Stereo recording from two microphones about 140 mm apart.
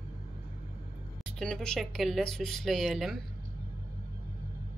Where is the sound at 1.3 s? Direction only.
5° left (ahead or behind).